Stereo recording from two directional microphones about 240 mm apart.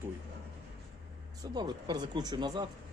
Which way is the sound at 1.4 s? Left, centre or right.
Centre.